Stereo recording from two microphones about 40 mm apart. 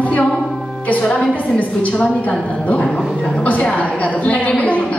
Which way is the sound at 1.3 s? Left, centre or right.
Left.